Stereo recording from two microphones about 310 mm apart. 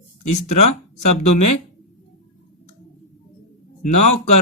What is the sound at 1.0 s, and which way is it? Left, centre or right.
Music, left.